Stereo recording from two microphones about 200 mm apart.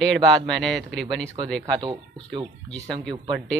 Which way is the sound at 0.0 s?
5° left (ahead or behind).